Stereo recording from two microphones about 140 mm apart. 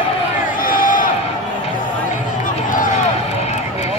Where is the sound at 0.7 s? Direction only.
75° left (ahead or behind).